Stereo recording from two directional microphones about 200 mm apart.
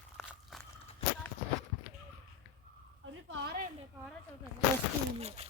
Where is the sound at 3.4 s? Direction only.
45° right (ahead or behind).